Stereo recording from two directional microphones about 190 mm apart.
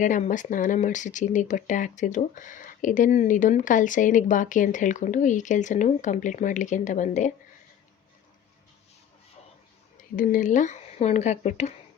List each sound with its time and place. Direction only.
0.0 s speech: 40° left (ahead or behind)
10.2 s speech: 45° left (ahead or behind)